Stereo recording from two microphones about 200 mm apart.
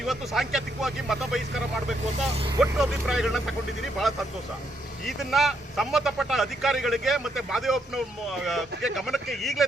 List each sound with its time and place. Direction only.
0.0 s speech: centre (ahead or behind)
2.1 s speech: 30° right (ahead or behind)
2.6 s speech: centre (ahead or behind)
5.0 s speech: centre (ahead or behind)